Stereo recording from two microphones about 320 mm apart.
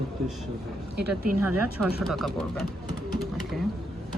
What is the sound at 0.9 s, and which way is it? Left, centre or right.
Speech, right.